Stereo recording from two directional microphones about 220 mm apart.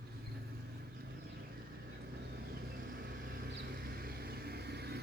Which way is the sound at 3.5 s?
45° right (ahead or behind).